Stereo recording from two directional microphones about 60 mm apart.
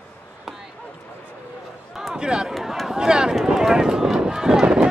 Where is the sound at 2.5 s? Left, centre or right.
Centre.